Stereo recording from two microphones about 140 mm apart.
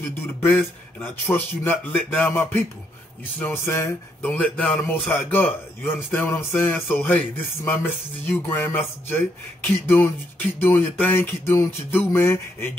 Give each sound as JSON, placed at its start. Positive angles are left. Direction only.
{"t": 0.4, "sound": "a man's voice", "side_deg": 15}
{"t": 9.8, "sound": "a man's voice", "side_deg": 15}